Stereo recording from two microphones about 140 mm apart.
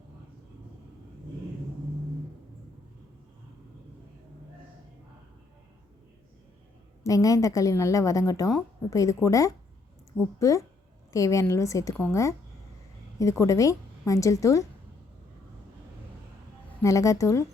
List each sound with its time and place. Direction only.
7.0 s a woman's voice: 25° left (ahead or behind)
10.1 s a woman's voice: 5° right (ahead or behind)
11.1 s a woman's voice: 25° left (ahead or behind)
16.8 s a woman's voice: 25° left (ahead or behind)